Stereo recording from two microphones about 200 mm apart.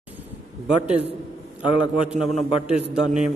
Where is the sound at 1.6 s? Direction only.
25° left (ahead or behind).